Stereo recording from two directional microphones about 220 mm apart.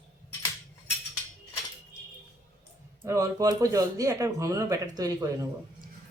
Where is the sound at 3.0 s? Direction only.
15° right (ahead or behind).